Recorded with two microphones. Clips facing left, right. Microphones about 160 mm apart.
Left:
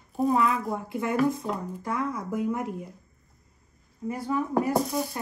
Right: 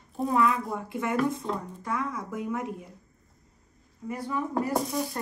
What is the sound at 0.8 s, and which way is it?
Speech, 30° left (ahead or behind).